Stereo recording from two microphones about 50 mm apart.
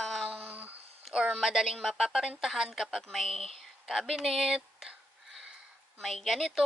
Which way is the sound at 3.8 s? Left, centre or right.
Centre.